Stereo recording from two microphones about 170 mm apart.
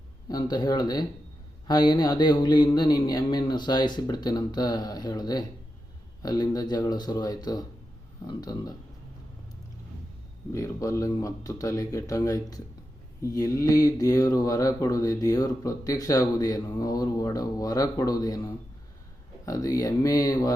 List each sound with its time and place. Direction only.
0.3 s mantra: 25° left (ahead or behind)
10.5 s mantra: 20° left (ahead or behind)